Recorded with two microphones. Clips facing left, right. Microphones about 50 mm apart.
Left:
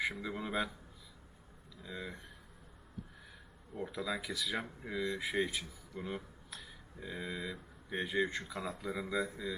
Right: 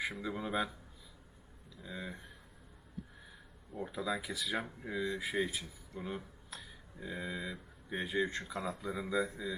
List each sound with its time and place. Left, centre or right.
0.0 s speech: centre
1.8 s speech: centre
3.8 s speech: centre